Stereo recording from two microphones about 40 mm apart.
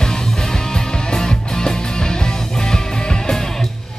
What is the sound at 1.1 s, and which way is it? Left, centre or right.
Music, centre.